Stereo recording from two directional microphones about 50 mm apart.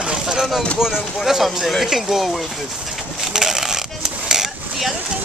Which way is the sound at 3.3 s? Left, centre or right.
Centre.